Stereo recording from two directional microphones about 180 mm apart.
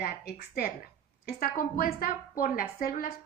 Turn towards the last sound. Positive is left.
turn(degrees=55)  # may be behind; listen again after turning